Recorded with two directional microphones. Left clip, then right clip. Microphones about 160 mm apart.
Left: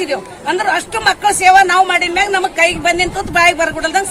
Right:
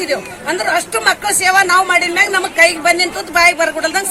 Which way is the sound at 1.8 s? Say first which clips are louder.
Even; 35° left (ahead or behind).